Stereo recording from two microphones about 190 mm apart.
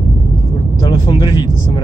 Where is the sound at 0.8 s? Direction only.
20° left (ahead or behind).